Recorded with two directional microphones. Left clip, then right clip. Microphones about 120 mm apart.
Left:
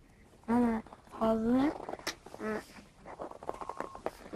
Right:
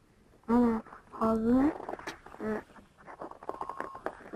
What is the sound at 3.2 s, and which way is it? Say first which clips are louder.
Stomach rumble: right 2 dB; 15° left (ahead or behind).